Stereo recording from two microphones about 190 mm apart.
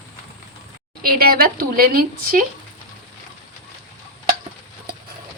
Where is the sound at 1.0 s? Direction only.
50° right (ahead or behind).